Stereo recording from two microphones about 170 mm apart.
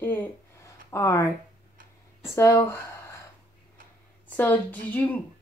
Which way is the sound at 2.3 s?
15° left (ahead or behind).